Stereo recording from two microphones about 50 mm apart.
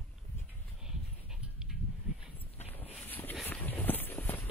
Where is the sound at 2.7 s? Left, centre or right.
Left.